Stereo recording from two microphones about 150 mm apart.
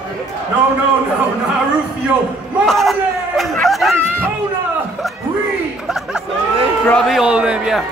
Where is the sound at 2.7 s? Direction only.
Centre (ahead or behind).